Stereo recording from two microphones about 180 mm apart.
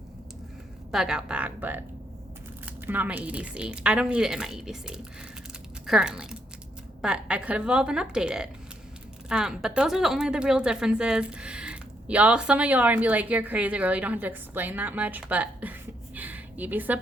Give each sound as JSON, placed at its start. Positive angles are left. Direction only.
{"t": 0.9, "sound": "speech", "side_deg": -5}
{"t": 2.8, "sound": "a woman's voice", "side_deg": -10}
{"t": 16.1, "sound": "a sound", "side_deg": -10}